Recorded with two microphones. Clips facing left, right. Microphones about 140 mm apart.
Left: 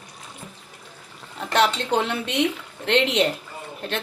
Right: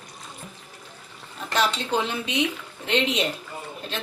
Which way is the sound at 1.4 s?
65° left (ahead or behind).